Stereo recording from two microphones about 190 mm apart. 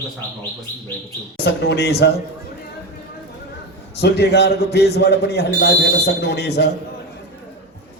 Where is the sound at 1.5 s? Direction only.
60° left (ahead or behind).